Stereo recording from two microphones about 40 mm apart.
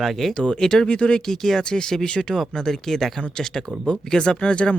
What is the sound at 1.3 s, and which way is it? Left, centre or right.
Speech, centre.